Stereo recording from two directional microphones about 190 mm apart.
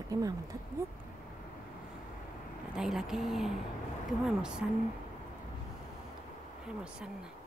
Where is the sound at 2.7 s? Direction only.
5° right (ahead or behind).